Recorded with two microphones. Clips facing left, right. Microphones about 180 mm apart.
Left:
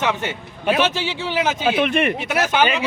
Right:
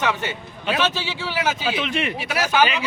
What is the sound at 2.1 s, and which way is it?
Speech, 20° left (ahead or behind).